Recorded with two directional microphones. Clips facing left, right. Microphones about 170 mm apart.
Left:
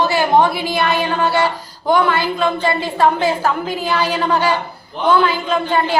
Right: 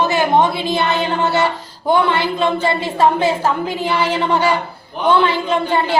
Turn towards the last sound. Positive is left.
turn(degrees=-25)  # may be behind; listen again after turning